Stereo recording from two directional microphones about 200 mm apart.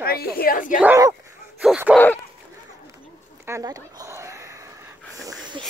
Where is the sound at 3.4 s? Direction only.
15° right (ahead or behind).